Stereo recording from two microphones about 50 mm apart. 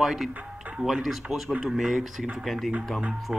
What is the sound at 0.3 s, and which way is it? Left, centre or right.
Music, right.